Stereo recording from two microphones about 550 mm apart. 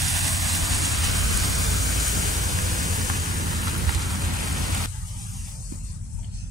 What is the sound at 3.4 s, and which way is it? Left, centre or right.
Vehicle, centre.